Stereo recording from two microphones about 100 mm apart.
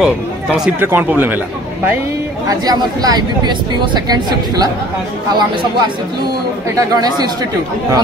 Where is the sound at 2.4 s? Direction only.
40° right (ahead or behind).